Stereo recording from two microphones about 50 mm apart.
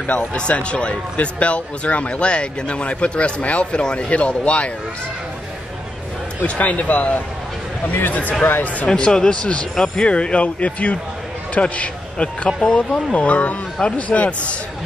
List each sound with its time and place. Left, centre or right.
0.0 s a man's voice: left
6.4 s a man's voice: left
7.8 s a man's voice: left
8.9 s a man's voice: centre
12.4 s speech: centre
12.7 s a man's voice: left